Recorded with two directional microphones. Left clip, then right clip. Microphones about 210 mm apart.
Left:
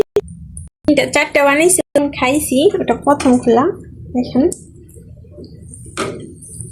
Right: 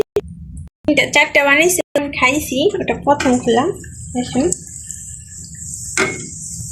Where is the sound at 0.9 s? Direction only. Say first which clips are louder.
Right 1 dB; 20° left (ahead or behind).